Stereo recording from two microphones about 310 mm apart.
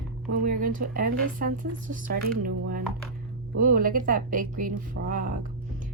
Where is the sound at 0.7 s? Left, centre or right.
Right.